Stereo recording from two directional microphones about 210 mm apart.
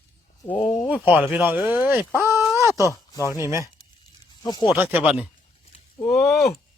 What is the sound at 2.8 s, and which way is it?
Speech, 15° left (ahead or behind).